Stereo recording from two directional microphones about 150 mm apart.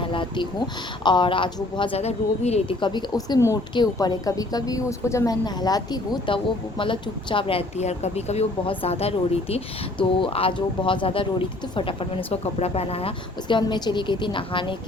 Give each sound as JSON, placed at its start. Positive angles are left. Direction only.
{"t": 0.0, "sound": "a sound", "side_deg": 35}
{"t": 1.0, "sound": "a woman's voice", "side_deg": 35}
{"t": 2.8, "sound": "a woman's voice", "side_deg": 30}